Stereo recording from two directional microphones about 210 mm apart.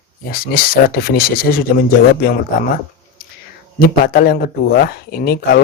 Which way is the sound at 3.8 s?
45° left (ahead or behind).